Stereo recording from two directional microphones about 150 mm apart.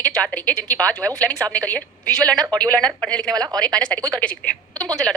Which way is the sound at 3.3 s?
25° right (ahead or behind).